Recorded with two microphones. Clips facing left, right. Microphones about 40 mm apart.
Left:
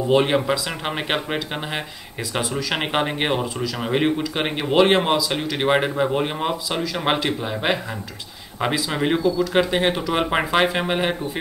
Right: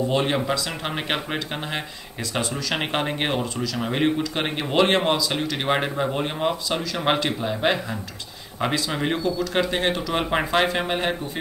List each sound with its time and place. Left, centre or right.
0.1 s speech: centre